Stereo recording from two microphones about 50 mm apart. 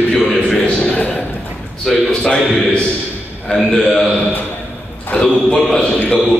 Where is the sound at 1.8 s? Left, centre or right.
Centre.